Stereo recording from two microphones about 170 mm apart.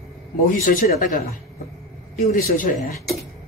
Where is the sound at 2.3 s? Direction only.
55° left (ahead or behind).